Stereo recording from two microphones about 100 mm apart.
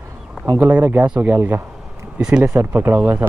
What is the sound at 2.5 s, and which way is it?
Speech, 20° right (ahead or behind).